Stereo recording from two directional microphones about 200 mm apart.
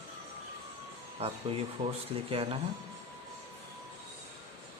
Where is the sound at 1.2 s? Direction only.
30° right (ahead or behind).